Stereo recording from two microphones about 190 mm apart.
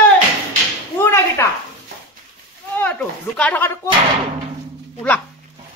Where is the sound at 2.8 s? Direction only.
10° left (ahead or behind).